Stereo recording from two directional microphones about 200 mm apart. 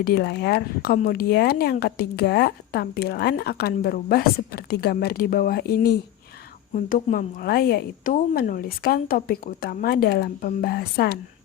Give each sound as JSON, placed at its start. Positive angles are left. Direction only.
{"t": 0.0, "sound": "speech", "side_deg": 55}